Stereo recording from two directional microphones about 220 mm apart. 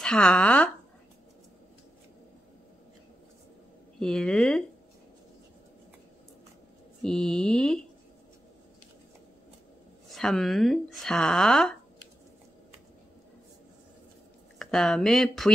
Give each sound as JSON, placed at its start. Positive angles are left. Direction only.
{"t": 0.0, "sound": "a woman's voice", "side_deg": 5}
{"t": 4.0, "sound": "a woman's voice", "side_deg": 5}
{"t": 7.0, "sound": "speech", "side_deg": 0}
{"t": 10.0, "sound": "a woman's voice", "side_deg": 0}
{"t": 14.6, "sound": "a woman's voice", "side_deg": 0}